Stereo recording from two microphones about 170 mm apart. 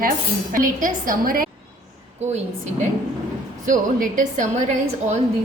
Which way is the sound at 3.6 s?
50° right (ahead or behind).